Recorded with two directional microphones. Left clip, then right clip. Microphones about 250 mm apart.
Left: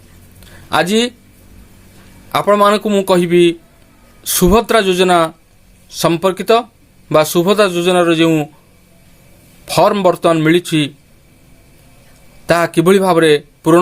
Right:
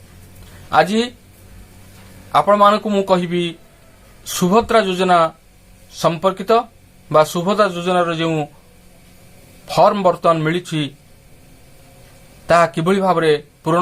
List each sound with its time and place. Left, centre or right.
0.7 s a man's voice: left
2.3 s a man's voice: left
9.6 s a man's voice: left
12.5 s a man's voice: left